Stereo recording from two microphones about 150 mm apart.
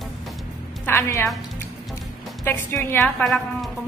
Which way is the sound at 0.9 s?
15° left (ahead or behind).